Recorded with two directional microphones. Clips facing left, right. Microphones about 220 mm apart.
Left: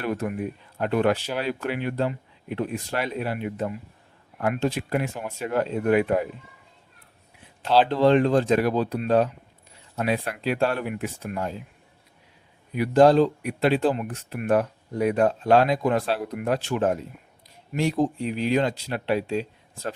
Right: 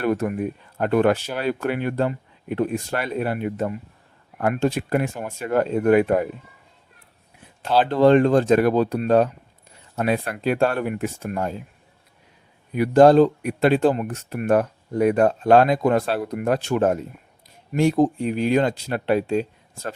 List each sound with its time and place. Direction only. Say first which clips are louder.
0.0 s speech: right 5 dB; 50° right (ahead or behind)
7.9 s speech: right 7 dB; 50° right (ahead or behind)
12.7 s speech: right 4 dB; 50° right (ahead or behind)